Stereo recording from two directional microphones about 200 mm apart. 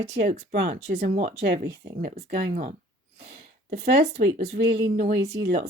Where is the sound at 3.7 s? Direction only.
55° right (ahead or behind).